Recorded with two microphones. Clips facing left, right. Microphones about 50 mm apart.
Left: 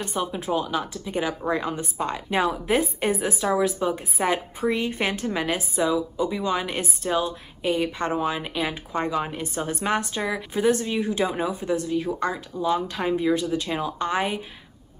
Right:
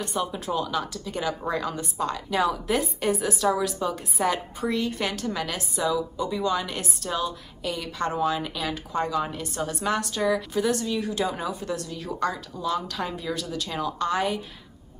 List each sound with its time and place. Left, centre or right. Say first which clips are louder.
0.0 s a woman's voice: left 1 dB; left